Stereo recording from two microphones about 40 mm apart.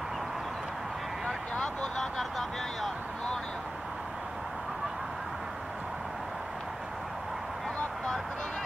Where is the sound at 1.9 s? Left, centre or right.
Centre.